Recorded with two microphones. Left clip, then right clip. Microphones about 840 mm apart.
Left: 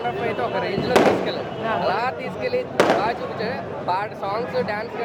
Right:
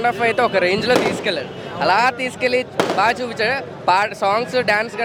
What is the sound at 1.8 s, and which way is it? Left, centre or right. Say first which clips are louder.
Speech: right 7 dB; right.